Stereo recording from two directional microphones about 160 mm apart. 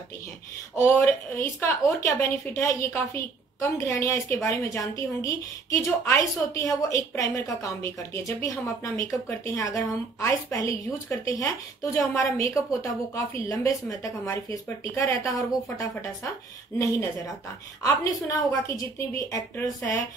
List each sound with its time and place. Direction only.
0.7 s a woman's voice: 15° left (ahead or behind)
17.8 s a woman's voice: 20° left (ahead or behind)